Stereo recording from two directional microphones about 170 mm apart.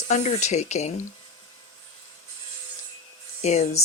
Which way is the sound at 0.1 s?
45° left (ahead or behind).